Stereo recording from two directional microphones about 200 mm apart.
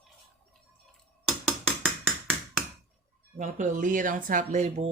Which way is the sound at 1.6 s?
5° left (ahead or behind).